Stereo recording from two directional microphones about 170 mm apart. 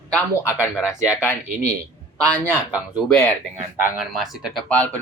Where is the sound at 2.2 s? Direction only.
10° left (ahead or behind).